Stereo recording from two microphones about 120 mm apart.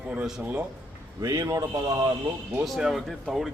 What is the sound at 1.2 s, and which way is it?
Speech, 30° right (ahead or behind).